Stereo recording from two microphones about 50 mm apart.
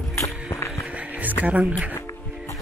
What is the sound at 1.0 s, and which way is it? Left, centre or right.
Music, right.